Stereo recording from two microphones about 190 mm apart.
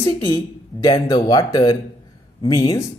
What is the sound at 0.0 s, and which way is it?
Speech, 15° left (ahead or behind).